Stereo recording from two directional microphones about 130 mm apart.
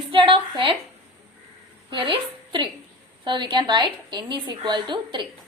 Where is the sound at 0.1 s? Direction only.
40° right (ahead or behind).